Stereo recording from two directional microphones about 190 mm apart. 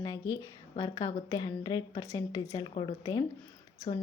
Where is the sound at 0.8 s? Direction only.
25° left (ahead or behind).